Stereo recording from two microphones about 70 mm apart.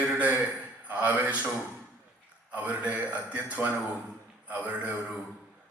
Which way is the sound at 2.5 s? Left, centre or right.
Right.